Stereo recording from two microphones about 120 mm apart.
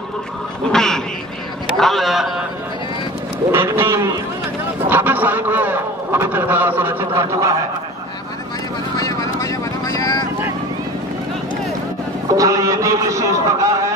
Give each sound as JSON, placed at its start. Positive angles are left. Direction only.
{"t": 0.7, "sound": "a man's voice", "side_deg": 5}
{"t": 3.5, "sound": "a man's voice", "side_deg": -20}
{"t": 8.9, "sound": "vehicle", "side_deg": 25}
{"t": 12.4, "sound": "a man's voice", "side_deg": -30}